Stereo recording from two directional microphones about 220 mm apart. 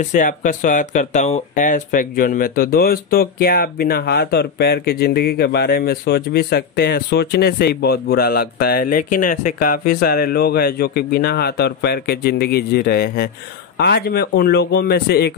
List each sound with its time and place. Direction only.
0.0 s speech: 35° left (ahead or behind)